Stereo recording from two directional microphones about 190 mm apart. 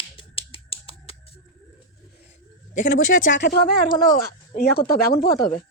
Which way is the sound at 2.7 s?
45° left (ahead or behind).